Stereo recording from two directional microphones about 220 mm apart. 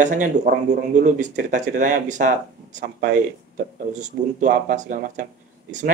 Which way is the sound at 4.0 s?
35° right (ahead or behind).